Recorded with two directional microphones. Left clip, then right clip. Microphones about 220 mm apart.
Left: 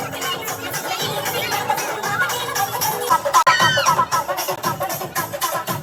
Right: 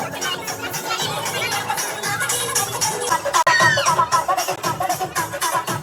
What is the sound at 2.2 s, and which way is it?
Music, 15° left (ahead or behind).